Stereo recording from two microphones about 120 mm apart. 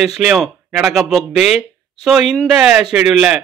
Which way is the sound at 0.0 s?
5° right (ahead or behind).